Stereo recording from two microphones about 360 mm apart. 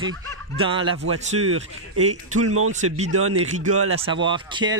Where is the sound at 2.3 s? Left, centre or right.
Right.